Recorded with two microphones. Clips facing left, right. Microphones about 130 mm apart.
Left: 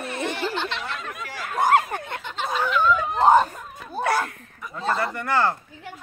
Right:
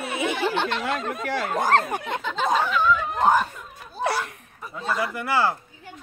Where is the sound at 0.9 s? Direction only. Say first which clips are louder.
Right 6 dB; 35° right (ahead or behind).